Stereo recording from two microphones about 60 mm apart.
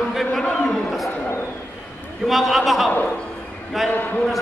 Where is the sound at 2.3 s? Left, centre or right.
Centre.